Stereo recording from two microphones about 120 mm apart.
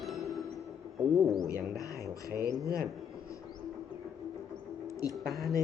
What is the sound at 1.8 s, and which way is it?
Speech, 30° left (ahead or behind).